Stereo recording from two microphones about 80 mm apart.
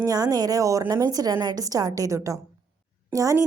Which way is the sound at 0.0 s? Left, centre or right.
Right.